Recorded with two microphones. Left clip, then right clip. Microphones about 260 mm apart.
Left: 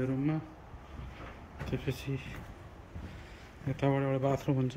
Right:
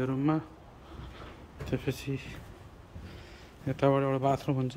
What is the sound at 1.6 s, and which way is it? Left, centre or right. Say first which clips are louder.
Speech: right 4 dB; centre.